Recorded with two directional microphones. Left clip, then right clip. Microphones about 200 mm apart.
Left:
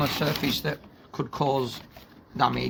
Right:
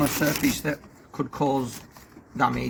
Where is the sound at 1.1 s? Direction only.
55° left (ahead or behind).